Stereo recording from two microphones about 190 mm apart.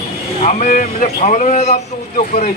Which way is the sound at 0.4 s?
45° left (ahead or behind).